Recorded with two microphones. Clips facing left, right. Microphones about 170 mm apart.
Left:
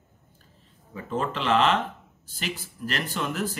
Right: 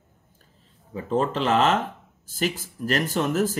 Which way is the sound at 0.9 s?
35° right (ahead or behind).